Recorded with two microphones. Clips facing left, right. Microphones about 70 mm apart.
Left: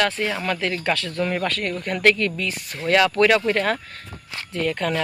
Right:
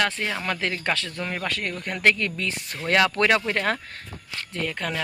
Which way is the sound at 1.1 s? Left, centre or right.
Centre.